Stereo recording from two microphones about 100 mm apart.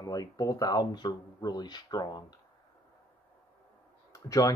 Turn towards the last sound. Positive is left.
turn(degrees=35)  # may be behind; listen again after turning